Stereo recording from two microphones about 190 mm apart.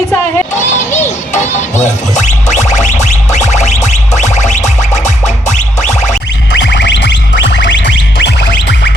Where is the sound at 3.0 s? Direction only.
40° left (ahead or behind).